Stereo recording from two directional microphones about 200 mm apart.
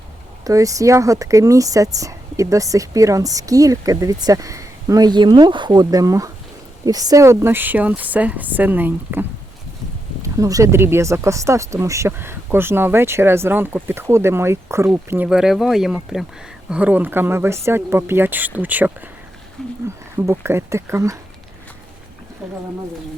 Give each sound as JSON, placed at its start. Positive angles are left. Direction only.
{"t": 0.4, "sound": "speech", "side_deg": -15}
{"t": 10.2, "sound": "speech", "side_deg": -15}
{"t": 19.6, "sound": "speech", "side_deg": 0}
{"t": 20.1, "sound": "speech", "side_deg": -10}